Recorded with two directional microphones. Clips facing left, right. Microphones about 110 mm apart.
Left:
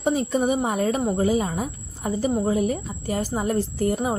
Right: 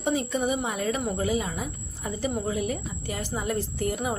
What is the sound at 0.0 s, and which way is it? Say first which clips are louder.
A woman's voice: left 4 dB; 40° left (ahead or behind).